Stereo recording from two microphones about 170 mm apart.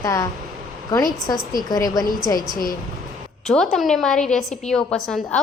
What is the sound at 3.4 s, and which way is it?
A woman's voice, centre (ahead or behind).